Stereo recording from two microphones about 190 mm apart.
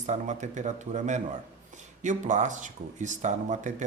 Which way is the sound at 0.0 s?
40° right (ahead or behind).